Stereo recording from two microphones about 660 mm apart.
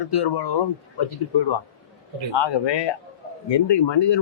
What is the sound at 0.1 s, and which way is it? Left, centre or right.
A man's voice, left.